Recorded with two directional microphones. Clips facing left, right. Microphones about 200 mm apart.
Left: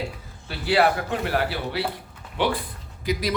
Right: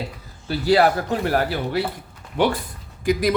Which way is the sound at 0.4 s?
40° right (ahead or behind).